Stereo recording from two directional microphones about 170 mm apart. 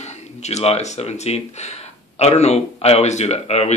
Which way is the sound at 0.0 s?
40° left (ahead or behind).